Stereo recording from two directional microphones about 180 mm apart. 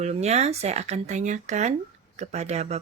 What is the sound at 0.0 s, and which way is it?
A woman's voice, 35° right (ahead or behind).